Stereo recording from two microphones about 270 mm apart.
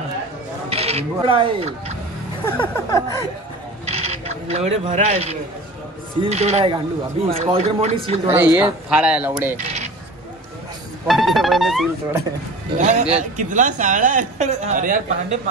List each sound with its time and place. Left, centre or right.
0.7 s speech: right
2.4 s a sound: centre
3.9 s mechanisms: right
6.2 s speech: right
8.5 s speech: centre
11.1 s speech: centre
12.7 s speech: right